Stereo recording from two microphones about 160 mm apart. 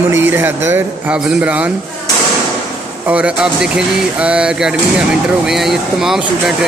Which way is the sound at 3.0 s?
10° right (ahead or behind).